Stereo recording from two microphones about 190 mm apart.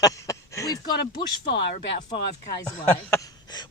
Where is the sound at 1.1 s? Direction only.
60° left (ahead or behind).